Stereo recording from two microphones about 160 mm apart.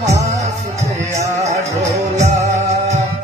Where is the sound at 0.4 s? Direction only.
45° right (ahead or behind).